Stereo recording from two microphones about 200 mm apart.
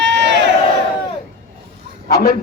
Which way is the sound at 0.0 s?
60° right (ahead or behind).